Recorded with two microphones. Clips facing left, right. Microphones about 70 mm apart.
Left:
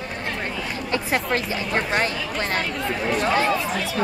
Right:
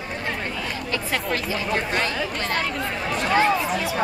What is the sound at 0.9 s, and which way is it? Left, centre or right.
Chatter, left.